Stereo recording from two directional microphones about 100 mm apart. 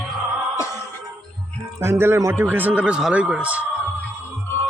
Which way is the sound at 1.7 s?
30° right (ahead or behind).